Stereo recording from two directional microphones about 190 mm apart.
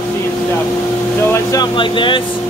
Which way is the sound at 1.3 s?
20° left (ahead or behind).